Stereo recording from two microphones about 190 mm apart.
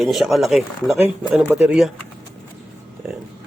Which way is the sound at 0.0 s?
Centre (ahead or behind).